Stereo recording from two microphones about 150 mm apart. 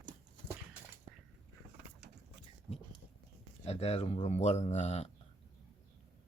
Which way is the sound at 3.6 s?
40° left (ahead or behind).